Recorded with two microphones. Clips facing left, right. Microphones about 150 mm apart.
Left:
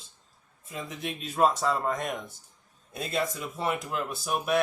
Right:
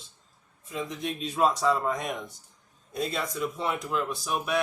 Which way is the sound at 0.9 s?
5° left (ahead or behind).